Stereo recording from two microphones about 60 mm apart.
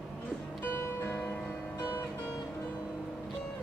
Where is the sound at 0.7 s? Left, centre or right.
Left.